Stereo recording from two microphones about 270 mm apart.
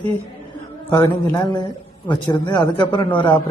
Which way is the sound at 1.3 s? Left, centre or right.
Centre.